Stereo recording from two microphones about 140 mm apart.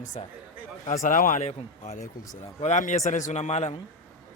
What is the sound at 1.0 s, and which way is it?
Speech, 75° left (ahead or behind).